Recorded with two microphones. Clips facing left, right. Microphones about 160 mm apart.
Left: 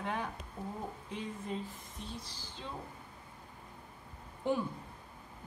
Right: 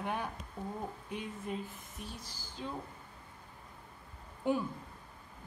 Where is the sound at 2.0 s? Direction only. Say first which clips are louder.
Left 1 dB; 25° left (ahead or behind).